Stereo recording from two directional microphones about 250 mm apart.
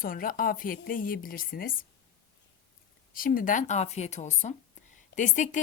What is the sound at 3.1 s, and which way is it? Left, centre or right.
Speech, left.